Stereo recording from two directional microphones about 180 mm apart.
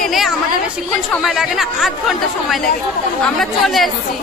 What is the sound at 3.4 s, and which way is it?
Speech, centre (ahead or behind).